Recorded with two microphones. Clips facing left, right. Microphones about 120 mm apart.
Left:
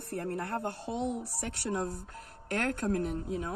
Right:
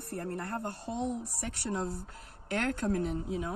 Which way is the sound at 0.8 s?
15° left (ahead or behind).